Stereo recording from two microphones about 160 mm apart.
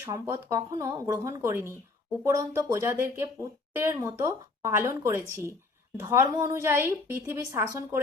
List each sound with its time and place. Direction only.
0.0 s a woman's voice: 15° right (ahead or behind)